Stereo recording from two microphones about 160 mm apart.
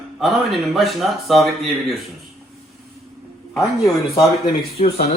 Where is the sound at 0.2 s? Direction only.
Centre (ahead or behind).